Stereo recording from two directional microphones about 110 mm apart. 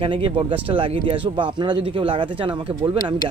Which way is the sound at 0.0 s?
50° right (ahead or behind).